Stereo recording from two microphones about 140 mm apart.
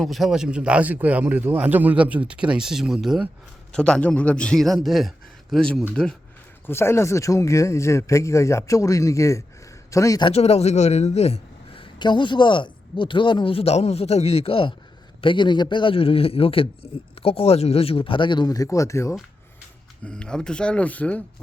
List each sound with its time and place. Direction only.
0.0 s a man's voice: centre (ahead or behind)
6.7 s a man's voice: 15° left (ahead or behind)
10.2 s a man's voice: 45° left (ahead or behind); by 19.1 s 20° left (ahead or behind)
20.1 s speech: 5° left (ahead or behind)